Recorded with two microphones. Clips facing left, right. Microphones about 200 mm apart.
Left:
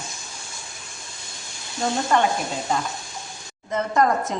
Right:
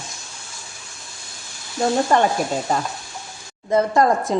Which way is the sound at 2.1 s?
35° right (ahead or behind).